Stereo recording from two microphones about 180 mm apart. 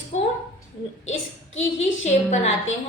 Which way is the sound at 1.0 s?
90° left.